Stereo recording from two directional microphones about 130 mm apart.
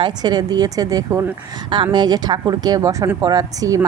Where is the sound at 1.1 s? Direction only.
20° right (ahead or behind).